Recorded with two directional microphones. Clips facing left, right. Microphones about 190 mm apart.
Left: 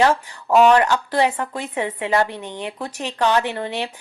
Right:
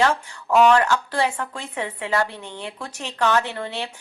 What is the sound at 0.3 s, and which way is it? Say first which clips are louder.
A woman's voice: even; 15° left (ahead or behind).